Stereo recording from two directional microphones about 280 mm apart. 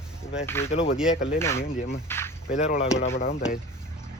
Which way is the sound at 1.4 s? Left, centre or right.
Centre.